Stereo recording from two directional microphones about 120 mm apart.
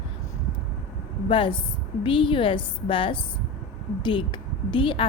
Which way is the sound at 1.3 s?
45° left (ahead or behind).